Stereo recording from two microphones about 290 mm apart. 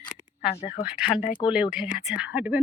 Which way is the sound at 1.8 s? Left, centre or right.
Left.